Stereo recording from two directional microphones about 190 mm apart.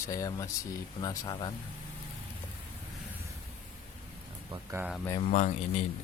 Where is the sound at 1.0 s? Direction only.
20° left (ahead or behind).